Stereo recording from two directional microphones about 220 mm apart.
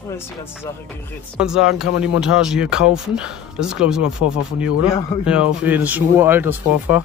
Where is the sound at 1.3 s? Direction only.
5° right (ahead or behind).